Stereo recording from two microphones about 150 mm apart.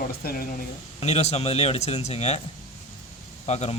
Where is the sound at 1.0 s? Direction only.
45° left (ahead or behind).